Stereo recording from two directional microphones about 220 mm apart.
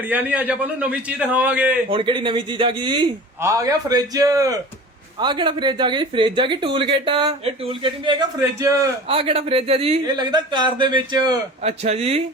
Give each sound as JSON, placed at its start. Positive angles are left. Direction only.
{"t": 0.1, "sound": "a man's voice", "side_deg": -5}
{"t": 1.9, "sound": "speech", "side_deg": -25}